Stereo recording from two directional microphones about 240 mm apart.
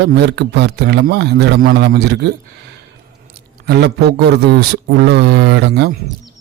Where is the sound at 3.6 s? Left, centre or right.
Right.